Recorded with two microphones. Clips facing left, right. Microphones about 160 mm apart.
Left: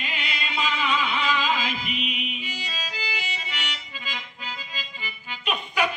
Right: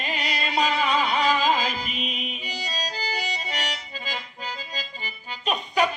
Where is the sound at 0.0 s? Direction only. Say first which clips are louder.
Right 4 dB; 40° right (ahead or behind).